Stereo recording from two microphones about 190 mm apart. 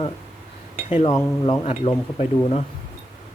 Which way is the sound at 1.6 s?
35° left (ahead or behind).